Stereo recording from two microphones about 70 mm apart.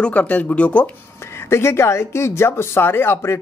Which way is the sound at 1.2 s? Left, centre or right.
Left.